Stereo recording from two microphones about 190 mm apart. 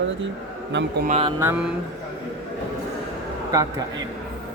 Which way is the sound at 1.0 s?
35° right (ahead or behind).